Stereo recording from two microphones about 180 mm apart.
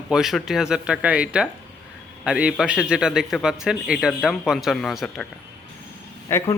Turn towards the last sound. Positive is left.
turn(degrees=15)  # may be behind; listen again after turning